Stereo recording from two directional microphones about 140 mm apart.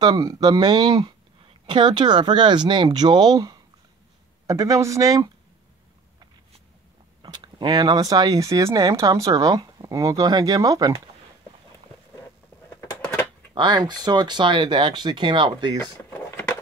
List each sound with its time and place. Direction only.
0.0 s speech: 25° right (ahead or behind)
7.2 s speech: 35° right (ahead or behind)
12.6 s a sound: 10° left (ahead or behind)
13.6 s speech: 30° right (ahead or behind)
15.8 s power windows: 15° left (ahead or behind)